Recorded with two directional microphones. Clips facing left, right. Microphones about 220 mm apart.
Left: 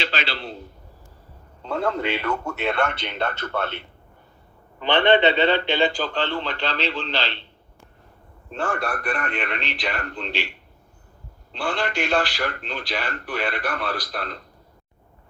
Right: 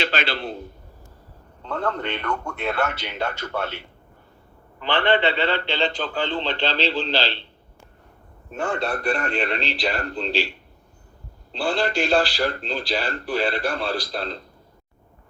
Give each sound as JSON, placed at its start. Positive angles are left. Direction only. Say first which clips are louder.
{"t": 0.0, "sound": "a man's voice", "louder": "right 3 dB", "side_deg": -50}
{"t": 1.6, "sound": "a man's voice", "louder": "left 2 dB", "side_deg": 10}
{"t": 4.8, "sound": "a man's voice", "louder": "left 3 dB", "side_deg": 20}
{"t": 5.9, "sound": "a man's voice", "louder": "left 1 dB", "side_deg": 0}
{"t": 6.1, "sound": "speech", "louder": "even", "side_deg": -15}
{"t": 6.4, "sound": "a man's voice", "louder": "right 3 dB", "side_deg": -30}
{"t": 8.4, "sound": "a man's voice", "louder": "right 1 dB", "side_deg": -15}
{"t": 11.5, "sound": "a man's voice", "louder": "right 3 dB", "side_deg": -30}